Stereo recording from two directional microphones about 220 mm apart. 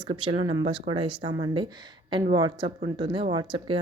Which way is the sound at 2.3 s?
20° right (ahead or behind).